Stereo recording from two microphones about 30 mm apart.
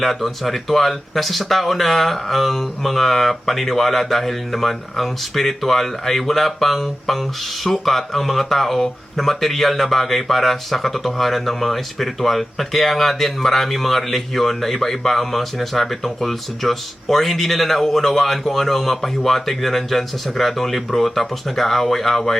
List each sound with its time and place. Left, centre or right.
0.0 s speech: centre